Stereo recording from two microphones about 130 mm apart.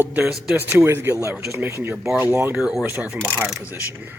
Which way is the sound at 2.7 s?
5° right (ahead or behind).